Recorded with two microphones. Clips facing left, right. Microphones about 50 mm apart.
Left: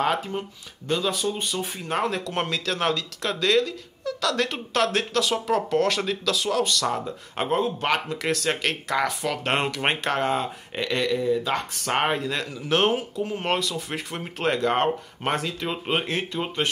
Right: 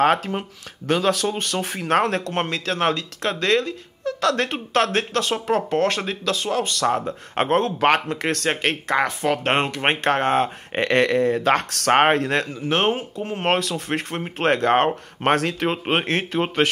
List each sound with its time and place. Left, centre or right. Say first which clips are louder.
0.8 s speech: right 5 dB; right
8.5 s speech: right 3 dB; right
11.9 s speech: right 7 dB; right
12.6 s speech: even; right
13.2 s speech: right 6 dB; right